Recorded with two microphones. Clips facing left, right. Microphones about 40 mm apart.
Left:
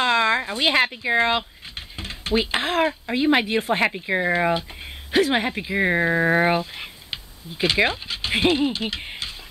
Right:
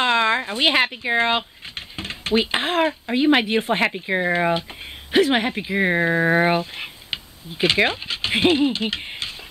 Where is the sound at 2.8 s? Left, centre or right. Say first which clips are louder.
Right 1 dB; centre.